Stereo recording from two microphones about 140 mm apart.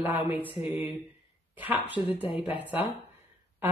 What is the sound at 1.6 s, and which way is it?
Speech, 10° right (ahead or behind).